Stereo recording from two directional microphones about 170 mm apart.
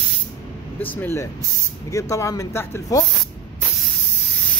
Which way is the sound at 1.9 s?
20° left (ahead or behind).